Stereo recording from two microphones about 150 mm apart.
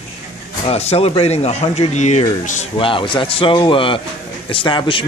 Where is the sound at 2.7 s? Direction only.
35° left (ahead or behind).